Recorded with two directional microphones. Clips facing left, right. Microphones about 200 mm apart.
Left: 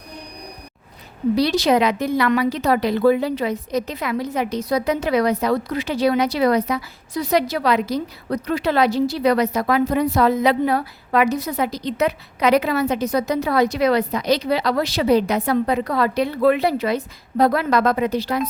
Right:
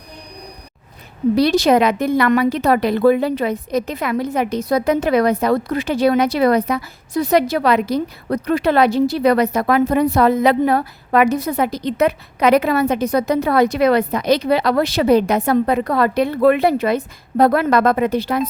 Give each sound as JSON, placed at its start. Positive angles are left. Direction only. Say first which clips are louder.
{"t": 1.4, "sound": "a woman's voice", "louder": "right 4 dB", "side_deg": -50}